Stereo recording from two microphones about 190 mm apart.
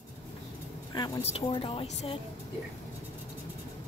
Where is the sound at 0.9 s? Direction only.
20° left (ahead or behind).